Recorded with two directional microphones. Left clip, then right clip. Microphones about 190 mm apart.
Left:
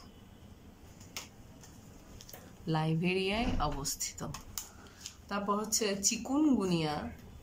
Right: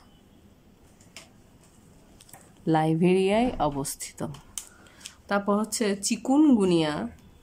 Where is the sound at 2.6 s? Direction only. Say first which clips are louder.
Right 11 dB; 40° right (ahead or behind).